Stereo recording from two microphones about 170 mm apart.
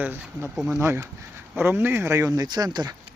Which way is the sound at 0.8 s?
15° right (ahead or behind).